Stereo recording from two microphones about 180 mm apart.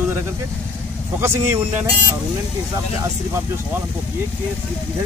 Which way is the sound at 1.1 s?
15° right (ahead or behind).